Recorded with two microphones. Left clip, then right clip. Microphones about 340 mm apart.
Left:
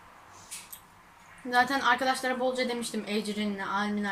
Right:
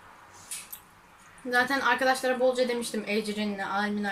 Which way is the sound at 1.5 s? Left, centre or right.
Centre.